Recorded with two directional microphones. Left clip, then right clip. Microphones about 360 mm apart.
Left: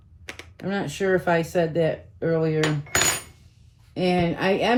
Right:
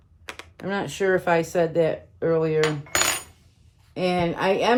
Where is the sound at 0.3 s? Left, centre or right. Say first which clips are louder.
Right 1 dB; centre.